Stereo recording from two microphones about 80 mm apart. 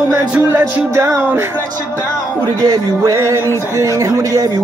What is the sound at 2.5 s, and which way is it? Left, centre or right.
Speech, right.